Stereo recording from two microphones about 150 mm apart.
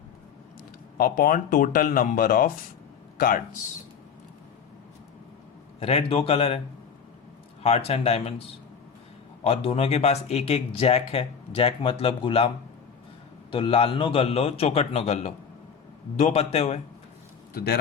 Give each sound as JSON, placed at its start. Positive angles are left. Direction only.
{"t": 0.9, "sound": "speech", "side_deg": 75}
{"t": 5.8, "sound": "speech", "side_deg": 40}
{"t": 7.6, "sound": "speech", "side_deg": 40}
{"t": 13.5, "sound": "a man's voice", "side_deg": 35}
{"t": 17.5, "sound": "a man's voice", "side_deg": 90}